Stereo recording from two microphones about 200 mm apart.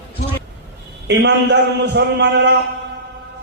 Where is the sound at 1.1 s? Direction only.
60° right (ahead or behind).